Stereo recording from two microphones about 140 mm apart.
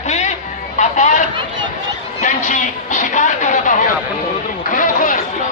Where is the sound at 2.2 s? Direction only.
60° left (ahead or behind).